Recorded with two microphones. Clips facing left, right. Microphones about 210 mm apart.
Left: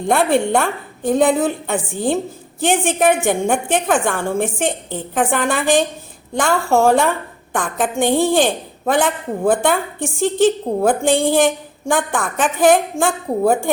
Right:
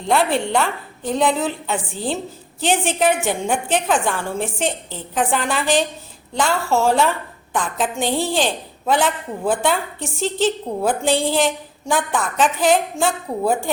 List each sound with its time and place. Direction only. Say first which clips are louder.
0.0 s a woman's voice: left 3 dB; 50° left (ahead or behind)